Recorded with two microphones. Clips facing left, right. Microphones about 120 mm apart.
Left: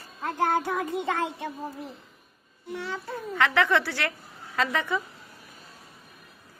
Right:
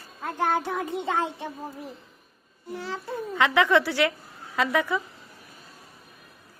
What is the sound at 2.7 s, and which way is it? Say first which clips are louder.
Speech: even; 30° right (ahead or behind).